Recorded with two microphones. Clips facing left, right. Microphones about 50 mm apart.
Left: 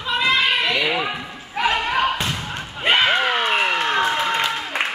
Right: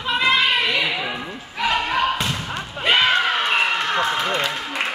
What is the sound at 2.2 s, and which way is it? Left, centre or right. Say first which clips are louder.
Basketball bounce: even; centre.